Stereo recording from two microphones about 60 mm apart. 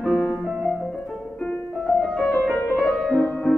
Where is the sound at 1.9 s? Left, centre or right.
Centre.